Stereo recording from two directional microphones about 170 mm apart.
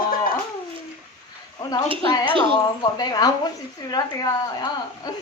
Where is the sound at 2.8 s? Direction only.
25° left (ahead or behind).